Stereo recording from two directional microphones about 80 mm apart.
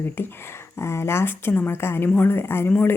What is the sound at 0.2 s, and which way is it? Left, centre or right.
Speech, left.